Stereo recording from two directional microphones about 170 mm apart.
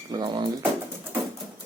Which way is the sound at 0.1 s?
25° right (ahead or behind).